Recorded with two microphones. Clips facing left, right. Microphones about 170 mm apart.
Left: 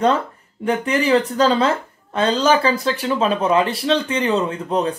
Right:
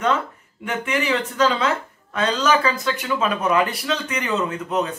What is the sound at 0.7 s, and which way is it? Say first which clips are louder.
Speech: left 5 dB; 35° left (ahead or behind).